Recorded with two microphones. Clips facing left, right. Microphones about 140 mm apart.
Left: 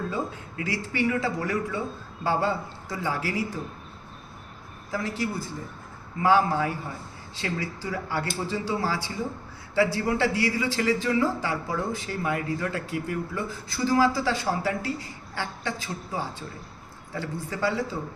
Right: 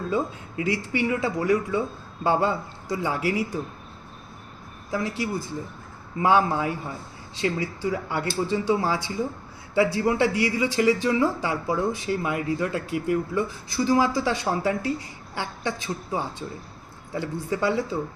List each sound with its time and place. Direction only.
0.1 s speech: 20° right (ahead or behind)
4.9 s speech: 15° right (ahead or behind)